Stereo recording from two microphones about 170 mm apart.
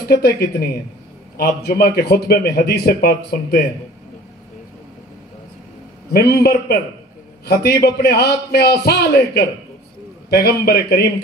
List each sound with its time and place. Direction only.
0.1 s a man's voice: 70° left (ahead or behind)
6.1 s a man's voice: 70° left (ahead or behind)